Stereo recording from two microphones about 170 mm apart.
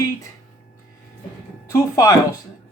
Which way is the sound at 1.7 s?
20° left (ahead or behind).